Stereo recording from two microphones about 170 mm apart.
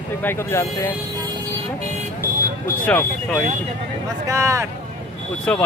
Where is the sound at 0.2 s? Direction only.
15° left (ahead or behind).